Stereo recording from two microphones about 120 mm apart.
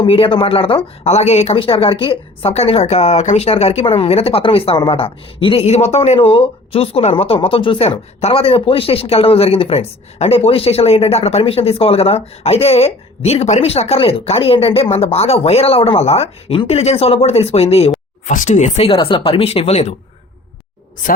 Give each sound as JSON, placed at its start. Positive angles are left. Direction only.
{"t": 0.0, "sound": "speech", "side_deg": 50}
{"t": 18.3, "sound": "speech", "side_deg": 85}
{"t": 18.9, "sound": "speech", "side_deg": 45}